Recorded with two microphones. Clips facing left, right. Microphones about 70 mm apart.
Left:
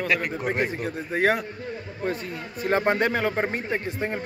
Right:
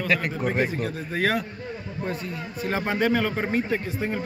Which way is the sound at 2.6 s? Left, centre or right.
Left.